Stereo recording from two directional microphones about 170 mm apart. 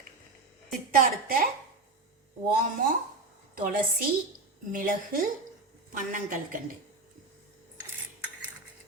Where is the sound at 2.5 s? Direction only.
55° right (ahead or behind).